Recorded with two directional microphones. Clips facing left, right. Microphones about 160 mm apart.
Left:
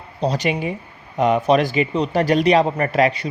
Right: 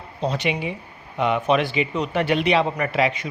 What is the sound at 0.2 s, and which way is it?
A man's voice, 40° left (ahead or behind).